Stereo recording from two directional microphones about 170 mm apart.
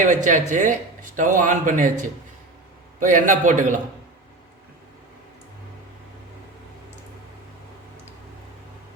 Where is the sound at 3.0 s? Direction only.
50° right (ahead or behind).